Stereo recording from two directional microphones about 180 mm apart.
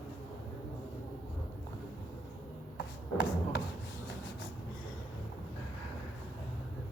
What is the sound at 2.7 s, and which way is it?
Rub, 65° left (ahead or behind).